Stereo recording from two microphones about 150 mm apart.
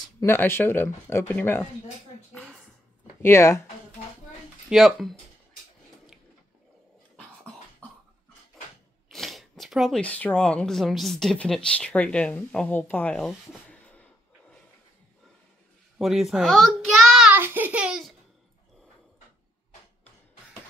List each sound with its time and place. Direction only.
0.2 s speech: 15° left (ahead or behind)
2.3 s a sound: centre (ahead or behind)
3.2 s speech: 15° left (ahead or behind)
4.6 s speech: centre (ahead or behind)
9.1 s speech: centre (ahead or behind)
16.0 s a child's voice: centre (ahead or behind)
17.3 s a child's voice: 10° right (ahead or behind)